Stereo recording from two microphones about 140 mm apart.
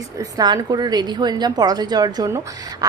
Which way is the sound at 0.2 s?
30° right (ahead or behind).